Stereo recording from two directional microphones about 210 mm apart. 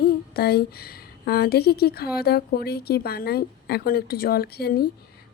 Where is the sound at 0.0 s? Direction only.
50° left (ahead or behind).